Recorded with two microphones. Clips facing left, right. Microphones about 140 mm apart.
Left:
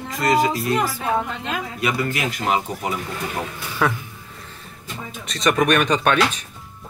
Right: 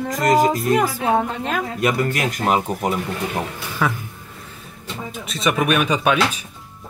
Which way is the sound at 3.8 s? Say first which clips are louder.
Left 1 dB; centre (ahead or behind).